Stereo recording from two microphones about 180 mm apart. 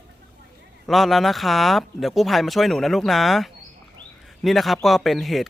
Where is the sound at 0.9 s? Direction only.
Centre (ahead or behind).